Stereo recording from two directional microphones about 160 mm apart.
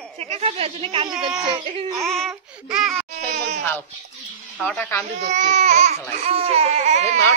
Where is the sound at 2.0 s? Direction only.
Centre (ahead or behind).